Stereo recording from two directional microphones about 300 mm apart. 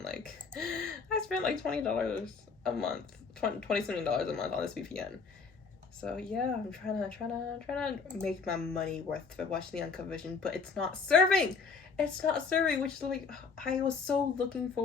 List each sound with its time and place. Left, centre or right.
0.6 s speech: centre